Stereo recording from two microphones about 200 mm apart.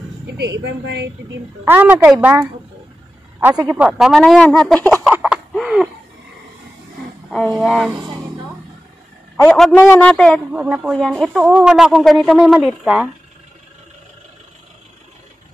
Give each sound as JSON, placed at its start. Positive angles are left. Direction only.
{"t": 0.4, "sound": "a woman's voice", "side_deg": -60}
{"t": 1.6, "sound": "speech", "side_deg": -10}
{"t": 5.1, "sound": "a sound", "side_deg": -5}
{"t": 7.2, "sound": "speech", "side_deg": 0}
{"t": 9.4, "sound": "speech", "side_deg": 5}
{"t": 10.5, "sound": "speech", "side_deg": -5}